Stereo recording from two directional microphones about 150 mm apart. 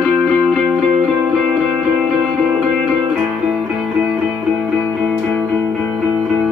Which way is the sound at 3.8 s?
5° right (ahead or behind).